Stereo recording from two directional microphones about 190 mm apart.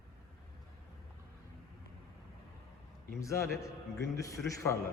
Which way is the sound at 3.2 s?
15° left (ahead or behind).